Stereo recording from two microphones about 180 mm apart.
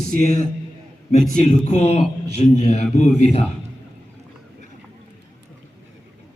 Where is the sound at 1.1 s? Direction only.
40° left (ahead or behind).